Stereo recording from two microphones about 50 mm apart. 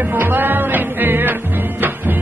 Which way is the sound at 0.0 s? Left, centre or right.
Right.